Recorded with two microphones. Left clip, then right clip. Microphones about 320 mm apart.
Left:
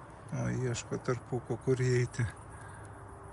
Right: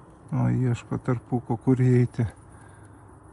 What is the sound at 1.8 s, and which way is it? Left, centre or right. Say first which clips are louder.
Speech: right 7 dB; centre.